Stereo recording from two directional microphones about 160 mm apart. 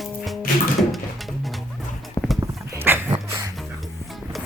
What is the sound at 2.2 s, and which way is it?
Clip-clop, 25° left (ahead or behind).